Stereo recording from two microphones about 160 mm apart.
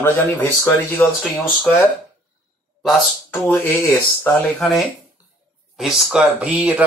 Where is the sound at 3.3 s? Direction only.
10° left (ahead or behind).